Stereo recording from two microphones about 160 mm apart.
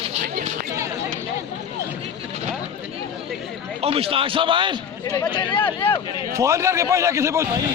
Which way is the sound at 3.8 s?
35° right (ahead or behind).